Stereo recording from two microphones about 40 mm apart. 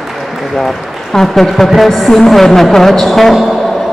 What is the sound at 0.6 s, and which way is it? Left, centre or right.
A woman's voice, centre.